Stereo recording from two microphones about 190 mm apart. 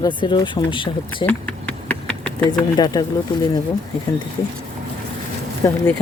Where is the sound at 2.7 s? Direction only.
20° left (ahead or behind).